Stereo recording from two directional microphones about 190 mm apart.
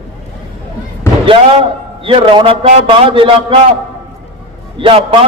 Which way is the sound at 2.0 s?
30° right (ahead or behind).